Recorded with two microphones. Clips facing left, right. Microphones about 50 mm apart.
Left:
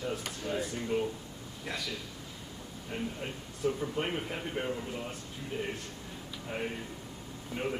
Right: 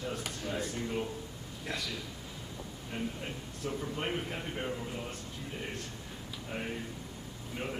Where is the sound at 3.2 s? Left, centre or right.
Centre.